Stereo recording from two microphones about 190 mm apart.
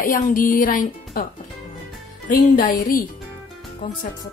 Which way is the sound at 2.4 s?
45° left (ahead or behind).